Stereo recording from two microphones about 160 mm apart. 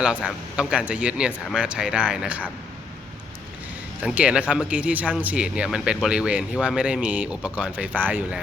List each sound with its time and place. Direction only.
0.5 s speech: 5° right (ahead or behind)
4.0 s speech: 5° right (ahead or behind)